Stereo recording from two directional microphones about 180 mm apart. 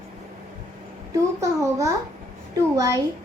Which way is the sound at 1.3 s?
15° right (ahead or behind).